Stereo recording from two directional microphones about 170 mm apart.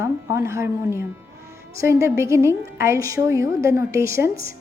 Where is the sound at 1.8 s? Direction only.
15° right (ahead or behind).